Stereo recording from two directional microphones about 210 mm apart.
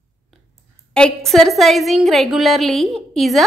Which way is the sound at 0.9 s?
5° left (ahead or behind).